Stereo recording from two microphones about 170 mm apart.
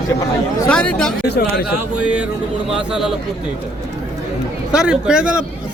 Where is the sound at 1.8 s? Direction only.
5° right (ahead or behind).